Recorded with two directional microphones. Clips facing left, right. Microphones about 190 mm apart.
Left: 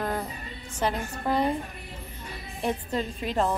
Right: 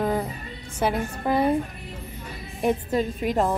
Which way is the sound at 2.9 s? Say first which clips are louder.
Right 4 dB; 10° right (ahead or behind).